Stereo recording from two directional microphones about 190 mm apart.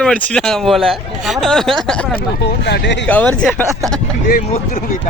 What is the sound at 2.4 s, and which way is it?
Speech, 60° left (ahead or behind).